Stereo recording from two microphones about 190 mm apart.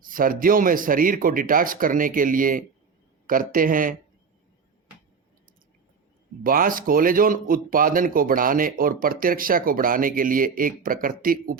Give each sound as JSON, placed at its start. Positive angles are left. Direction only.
{"t": 0.0, "sound": "speech", "side_deg": -45}
{"t": 6.4, "sound": "speech", "side_deg": -50}